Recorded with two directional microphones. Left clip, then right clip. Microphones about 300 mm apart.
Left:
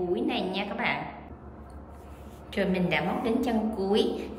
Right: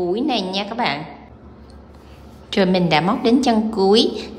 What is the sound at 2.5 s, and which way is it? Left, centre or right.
A woman's voice, centre.